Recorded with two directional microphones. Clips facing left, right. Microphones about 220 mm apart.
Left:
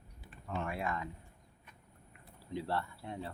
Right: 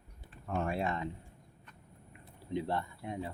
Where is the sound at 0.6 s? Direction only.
25° right (ahead or behind).